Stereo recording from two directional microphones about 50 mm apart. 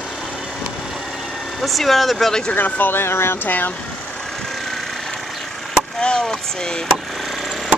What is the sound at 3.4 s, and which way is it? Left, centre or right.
Speech, left.